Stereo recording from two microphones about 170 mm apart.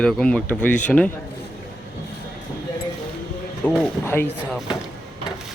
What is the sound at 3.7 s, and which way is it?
Speech, 15° left (ahead or behind).